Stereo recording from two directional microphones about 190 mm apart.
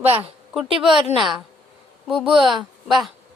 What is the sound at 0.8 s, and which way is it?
Speech, 25° right (ahead or behind).